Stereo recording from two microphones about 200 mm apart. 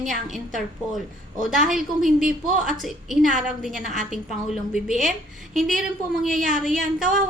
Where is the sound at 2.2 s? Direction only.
40° right (ahead or behind).